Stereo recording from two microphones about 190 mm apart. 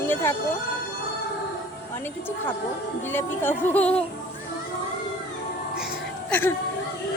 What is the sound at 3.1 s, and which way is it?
Speech, 10° left (ahead or behind).